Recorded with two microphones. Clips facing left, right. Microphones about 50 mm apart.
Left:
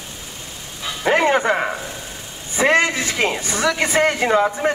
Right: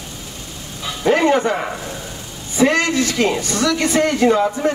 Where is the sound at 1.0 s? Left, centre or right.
Left.